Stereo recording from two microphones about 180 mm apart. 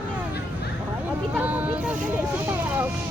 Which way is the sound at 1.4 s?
10° right (ahead or behind).